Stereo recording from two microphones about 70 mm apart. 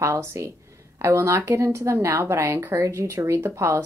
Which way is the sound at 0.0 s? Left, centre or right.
Right.